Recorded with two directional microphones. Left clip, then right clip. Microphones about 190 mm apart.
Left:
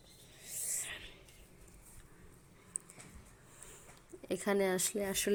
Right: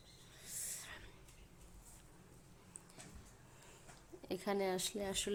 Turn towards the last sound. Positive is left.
turn(degrees=15)  # may be behind; listen again after turning